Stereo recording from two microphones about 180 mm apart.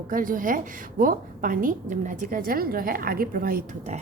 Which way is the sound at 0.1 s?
50° right (ahead or behind).